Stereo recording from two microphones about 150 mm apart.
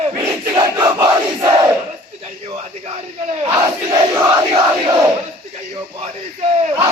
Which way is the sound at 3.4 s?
25° right (ahead or behind).